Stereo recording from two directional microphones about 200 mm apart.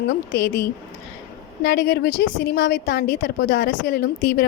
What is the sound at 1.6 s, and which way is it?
A woman's voice, 60° left (ahead or behind).